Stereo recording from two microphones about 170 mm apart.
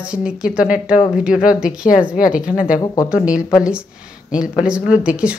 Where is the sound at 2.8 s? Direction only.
20° left (ahead or behind).